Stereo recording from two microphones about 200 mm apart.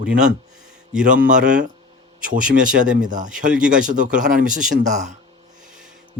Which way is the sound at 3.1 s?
40° right (ahead or behind).